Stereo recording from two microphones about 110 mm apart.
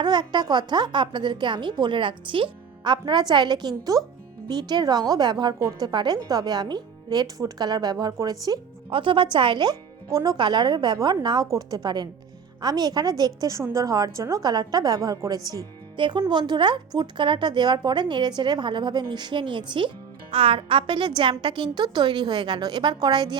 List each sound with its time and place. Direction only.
0.0 s a woman's voice: 40° right (ahead or behind)
8.9 s a woman's voice: 50° right (ahead or behind)
10.1 s a woman's voice: 30° right (ahead or behind)
10.3 s a woman's voice: 45° right (ahead or behind)